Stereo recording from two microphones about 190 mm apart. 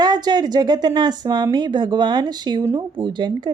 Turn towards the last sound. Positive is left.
turn(degrees=-25)  # may be behind; listen again after turning